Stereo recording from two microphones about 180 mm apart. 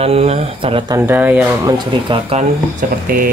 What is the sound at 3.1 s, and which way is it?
Speech, 55° right (ahead or behind).